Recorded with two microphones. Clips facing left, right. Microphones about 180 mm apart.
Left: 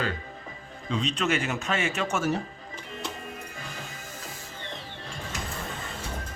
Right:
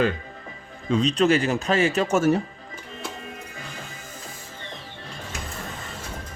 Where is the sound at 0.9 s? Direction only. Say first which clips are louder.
Right 8 dB; 35° right (ahead or behind).